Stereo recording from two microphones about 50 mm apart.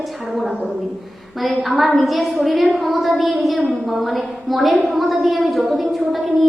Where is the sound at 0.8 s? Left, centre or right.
Centre.